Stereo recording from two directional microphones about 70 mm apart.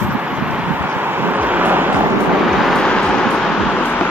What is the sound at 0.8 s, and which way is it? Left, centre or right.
Vehicle, right.